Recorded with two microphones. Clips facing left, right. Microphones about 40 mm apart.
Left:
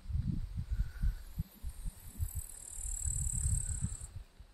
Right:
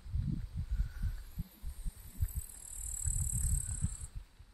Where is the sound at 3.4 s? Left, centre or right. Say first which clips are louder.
Left 1 dB; centre.